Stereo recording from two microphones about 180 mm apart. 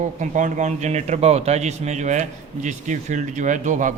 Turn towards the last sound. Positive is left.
turn(degrees=-45)  # may be behind; listen again after turning